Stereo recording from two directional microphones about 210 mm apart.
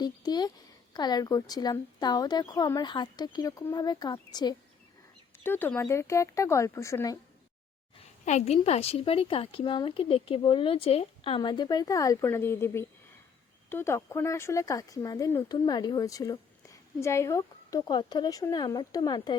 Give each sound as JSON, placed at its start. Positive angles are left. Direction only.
{"t": 0.0, "sound": "a woman's voice", "side_deg": 20}
{"t": 8.2, "sound": "a woman's voice", "side_deg": 35}